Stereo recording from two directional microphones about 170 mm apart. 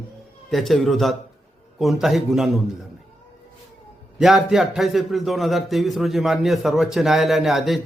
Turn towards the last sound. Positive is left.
turn(degrees=0)  # may be behind; listen again after turning